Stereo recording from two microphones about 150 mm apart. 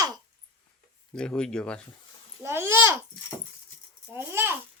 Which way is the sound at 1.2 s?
5° left (ahead or behind).